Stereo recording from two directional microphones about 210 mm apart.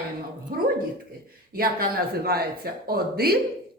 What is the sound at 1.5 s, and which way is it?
Speech, 45° right (ahead or behind).